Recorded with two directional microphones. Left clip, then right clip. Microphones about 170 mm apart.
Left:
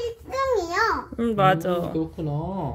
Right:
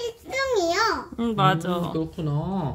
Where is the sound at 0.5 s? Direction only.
45° right (ahead or behind).